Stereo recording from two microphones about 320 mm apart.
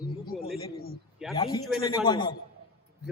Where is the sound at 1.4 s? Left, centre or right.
Centre.